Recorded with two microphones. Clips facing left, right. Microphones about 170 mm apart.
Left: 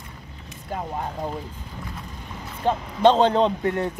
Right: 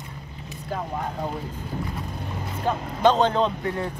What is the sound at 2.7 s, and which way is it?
Speech, 30° left (ahead or behind).